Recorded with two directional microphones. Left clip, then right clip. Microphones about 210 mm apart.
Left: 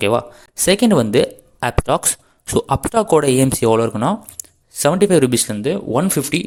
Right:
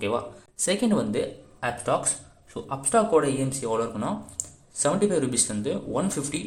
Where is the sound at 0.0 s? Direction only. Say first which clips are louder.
Left 11 dB; 40° left (ahead or behind).